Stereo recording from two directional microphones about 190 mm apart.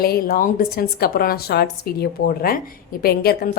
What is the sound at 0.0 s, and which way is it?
A woman's voice, 50° left (ahead or behind).